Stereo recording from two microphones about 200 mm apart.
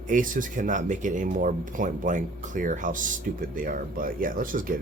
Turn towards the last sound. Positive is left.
turn(degrees=-45)  # may be behind; listen again after turning